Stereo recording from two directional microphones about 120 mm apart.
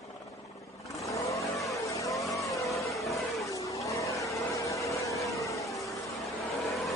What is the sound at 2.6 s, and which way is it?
Vehicle, centre (ahead or behind).